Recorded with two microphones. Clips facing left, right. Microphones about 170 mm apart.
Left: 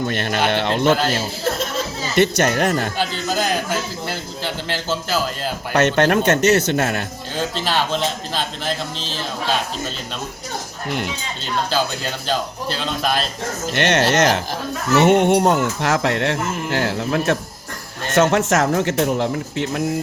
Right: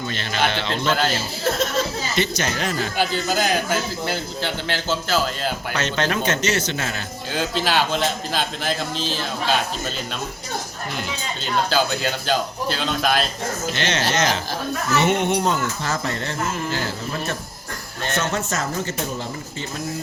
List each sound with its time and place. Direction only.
0.0 s speech: 55° left (ahead or behind)
2.1 s speech: 55° left (ahead or behind)
3.0 s a man's voice: 5° right (ahead or behind)
5.7 s speech: 60° left (ahead or behind)
7.3 s a man's voice: 5° right (ahead or behind)
11.7 s a man's voice: centre (ahead or behind)
13.7 s speech: 65° left (ahead or behind)
14.9 s speech: 55° left (ahead or behind); by 17.3 s 70° left (ahead or behind)
18.1 s speech: 90° left; by 19.8 s 75° left (ahead or behind)